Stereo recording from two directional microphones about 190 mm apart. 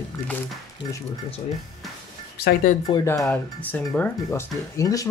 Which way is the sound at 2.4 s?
50° left (ahead or behind).